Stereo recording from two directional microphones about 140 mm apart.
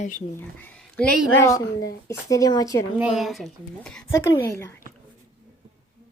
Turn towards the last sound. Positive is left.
turn(degrees=20)  # may be behind; listen again after turning